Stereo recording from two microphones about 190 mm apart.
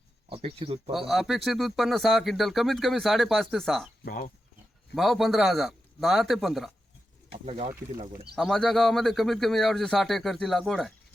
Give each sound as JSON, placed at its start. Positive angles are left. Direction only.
{"t": 0.3, "sound": "speech", "side_deg": -30}
{"t": 0.9, "sound": "speech", "side_deg": 0}
{"t": 4.0, "sound": "speech", "side_deg": 45}
{"t": 4.9, "sound": "speech", "side_deg": 0}
{"t": 7.4, "sound": "speech", "side_deg": -30}
{"t": 8.4, "sound": "speech", "side_deg": 0}